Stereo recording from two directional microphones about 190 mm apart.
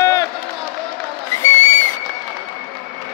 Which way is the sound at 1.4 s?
15° left (ahead or behind).